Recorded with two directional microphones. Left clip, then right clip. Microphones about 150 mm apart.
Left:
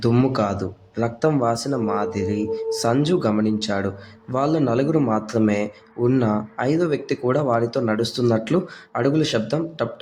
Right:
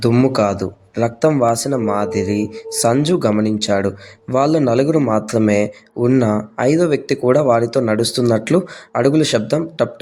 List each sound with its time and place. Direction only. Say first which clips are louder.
0.0 s a man's voice: right 5 dB; 25° right (ahead or behind)